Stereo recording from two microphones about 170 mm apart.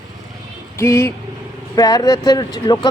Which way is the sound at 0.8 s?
15° left (ahead or behind).